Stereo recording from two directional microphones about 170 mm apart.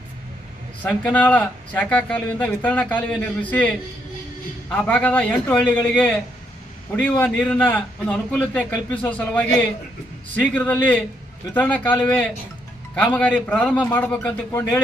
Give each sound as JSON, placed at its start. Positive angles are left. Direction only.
{"t": 0.9, "sound": "speech", "side_deg": 10}
{"t": 6.9, "sound": "speech", "side_deg": 10}